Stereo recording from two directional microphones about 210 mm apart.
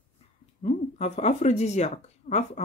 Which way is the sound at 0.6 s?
30° left (ahead or behind).